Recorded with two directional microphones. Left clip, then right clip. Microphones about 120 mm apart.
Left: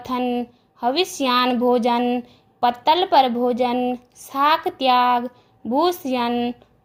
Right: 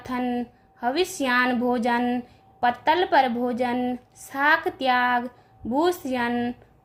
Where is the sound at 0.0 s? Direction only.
35° left (ahead or behind).